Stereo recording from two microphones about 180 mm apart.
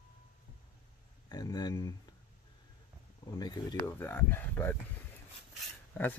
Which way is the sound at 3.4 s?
25° left (ahead or behind).